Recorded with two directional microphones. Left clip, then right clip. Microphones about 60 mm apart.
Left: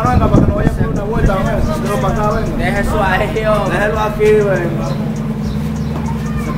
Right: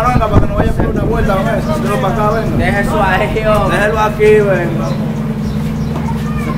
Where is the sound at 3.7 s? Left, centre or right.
Centre.